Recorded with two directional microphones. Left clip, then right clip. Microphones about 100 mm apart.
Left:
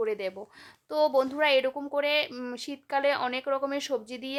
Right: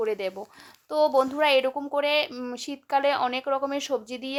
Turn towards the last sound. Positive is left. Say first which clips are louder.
# right 3 dB
turn(degrees=-10)  # may be behind; listen again after turning